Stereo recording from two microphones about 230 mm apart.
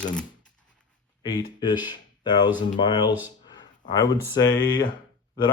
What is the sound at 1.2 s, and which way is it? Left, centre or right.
Speech, centre.